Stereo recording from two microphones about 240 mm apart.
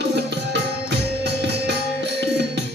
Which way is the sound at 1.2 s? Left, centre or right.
Right.